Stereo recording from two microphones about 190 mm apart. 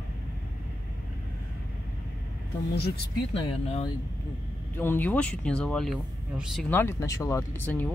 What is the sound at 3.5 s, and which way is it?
Speech, 35° left (ahead or behind).